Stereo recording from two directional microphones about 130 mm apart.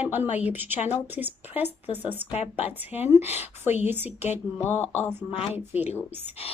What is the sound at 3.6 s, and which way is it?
Speech, 60° left (ahead or behind).